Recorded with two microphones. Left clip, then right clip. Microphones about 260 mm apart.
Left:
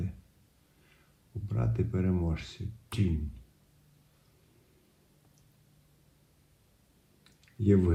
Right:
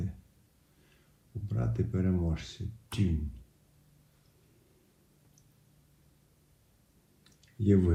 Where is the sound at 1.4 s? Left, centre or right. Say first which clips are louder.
Left 1 dB; left.